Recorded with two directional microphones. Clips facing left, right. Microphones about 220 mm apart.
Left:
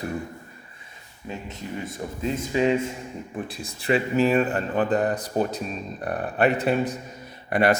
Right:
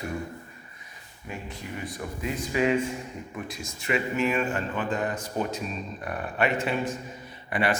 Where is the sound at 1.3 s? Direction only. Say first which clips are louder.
Left 3 dB; 25° left (ahead or behind).